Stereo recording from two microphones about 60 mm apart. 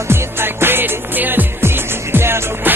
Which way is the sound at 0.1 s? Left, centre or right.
Right.